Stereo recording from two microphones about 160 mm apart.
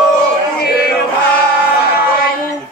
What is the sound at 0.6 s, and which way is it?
Chant, 75° left (ahead or behind).